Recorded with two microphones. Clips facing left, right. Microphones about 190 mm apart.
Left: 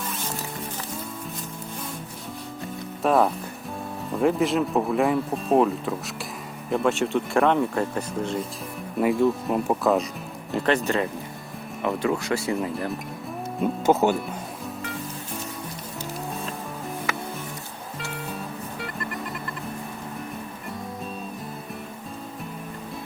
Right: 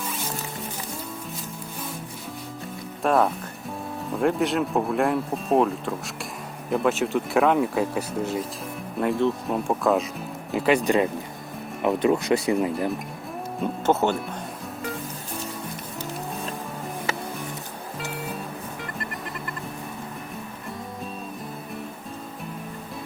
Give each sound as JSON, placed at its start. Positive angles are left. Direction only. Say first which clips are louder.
{"t": 3.0, "sound": "speech", "louder": "left 1 dB", "side_deg": 0}
{"t": 13.6, "sound": "speech", "louder": "left 2 dB", "side_deg": 10}